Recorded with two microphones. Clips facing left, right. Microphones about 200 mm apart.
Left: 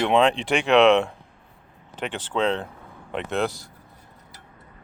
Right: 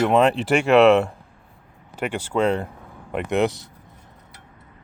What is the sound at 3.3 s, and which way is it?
Speech, 20° right (ahead or behind).